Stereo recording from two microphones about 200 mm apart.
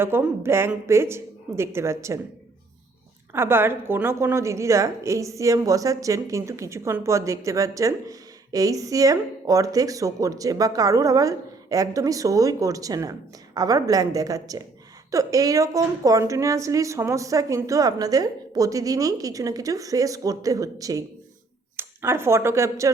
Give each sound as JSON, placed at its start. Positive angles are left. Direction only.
{"t": 0.0, "sound": "speech", "side_deg": -10}
{"t": 3.3, "sound": "speech", "side_deg": -10}